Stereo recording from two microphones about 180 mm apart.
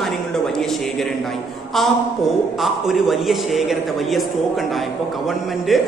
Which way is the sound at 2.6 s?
Centre (ahead or behind).